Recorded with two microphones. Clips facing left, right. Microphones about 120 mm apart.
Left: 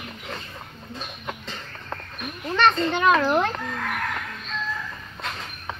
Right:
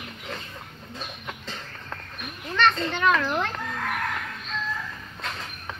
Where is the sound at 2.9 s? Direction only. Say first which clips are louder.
Left 3 dB; 20° left (ahead or behind).